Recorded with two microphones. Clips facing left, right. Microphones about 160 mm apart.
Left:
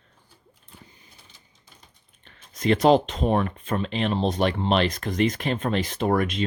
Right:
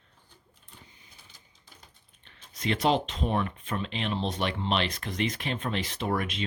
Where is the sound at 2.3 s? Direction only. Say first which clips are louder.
Left 8 dB; 45° left (ahead or behind).